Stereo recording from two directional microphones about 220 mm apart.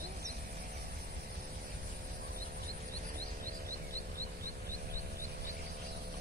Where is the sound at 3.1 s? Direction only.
40° right (ahead or behind).